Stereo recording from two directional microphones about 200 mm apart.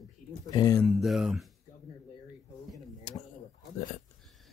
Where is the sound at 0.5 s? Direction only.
20° left (ahead or behind).